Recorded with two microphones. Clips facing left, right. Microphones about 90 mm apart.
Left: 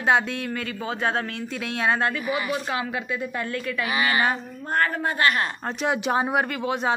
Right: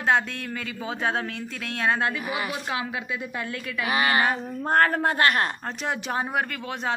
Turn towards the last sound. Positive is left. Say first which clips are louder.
# left 5 dB
turn(degrees=10)  # may be behind; listen again after turning